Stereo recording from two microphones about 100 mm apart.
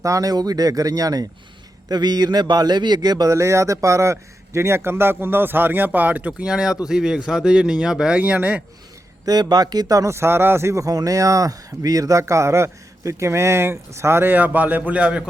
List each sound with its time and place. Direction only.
0.0 s a man's voice: 35° right (ahead or behind); by 8.6 s 15° right (ahead or behind)
9.2 s a man's voice: 40° right (ahead or behind); by 15.2 s 10° right (ahead or behind)